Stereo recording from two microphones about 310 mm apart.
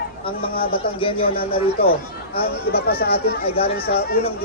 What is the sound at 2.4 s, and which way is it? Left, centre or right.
Speech, left.